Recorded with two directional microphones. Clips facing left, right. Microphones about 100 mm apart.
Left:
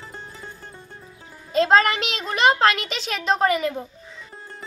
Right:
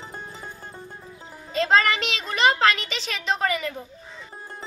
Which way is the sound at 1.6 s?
40° left (ahead or behind).